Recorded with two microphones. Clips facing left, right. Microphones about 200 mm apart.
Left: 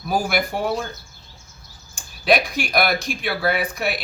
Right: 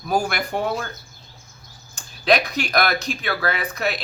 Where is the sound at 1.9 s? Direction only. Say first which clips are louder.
Even; 10° left (ahead or behind).